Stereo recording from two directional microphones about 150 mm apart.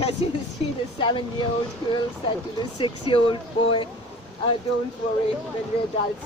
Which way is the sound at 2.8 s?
35° left (ahead or behind).